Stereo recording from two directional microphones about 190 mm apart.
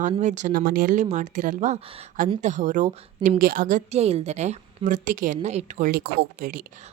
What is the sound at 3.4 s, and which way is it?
A woman's voice, 50° right (ahead or behind).